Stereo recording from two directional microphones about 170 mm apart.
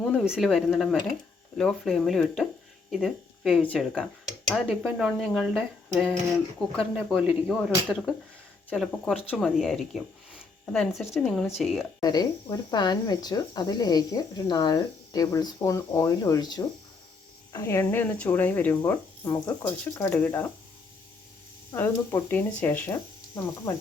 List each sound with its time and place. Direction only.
0.0 s speech: 5° right (ahead or behind)
11.9 s speech: 25° left (ahead or behind)
21.8 s speech: 10° left (ahead or behind)